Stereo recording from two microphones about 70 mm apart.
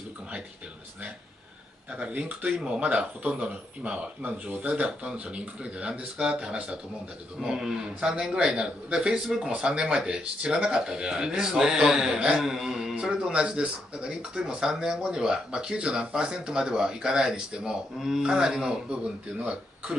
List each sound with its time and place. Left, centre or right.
1.9 s a man's voice: centre